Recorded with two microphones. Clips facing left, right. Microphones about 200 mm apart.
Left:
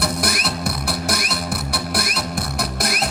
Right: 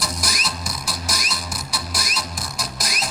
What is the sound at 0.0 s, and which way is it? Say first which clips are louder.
Music: left 6 dB; 60° left (ahead or behind).